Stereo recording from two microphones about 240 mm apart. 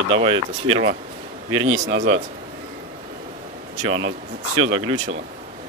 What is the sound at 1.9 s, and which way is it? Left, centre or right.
Speech, right.